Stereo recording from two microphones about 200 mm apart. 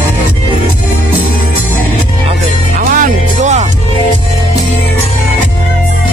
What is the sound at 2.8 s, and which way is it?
Music, 40° right (ahead or behind).